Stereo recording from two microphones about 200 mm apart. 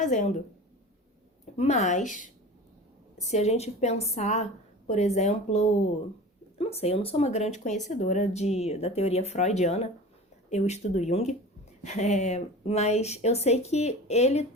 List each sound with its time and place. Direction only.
0.0 s speech: 40° left (ahead or behind)
1.5 s speech: 35° left (ahead or behind)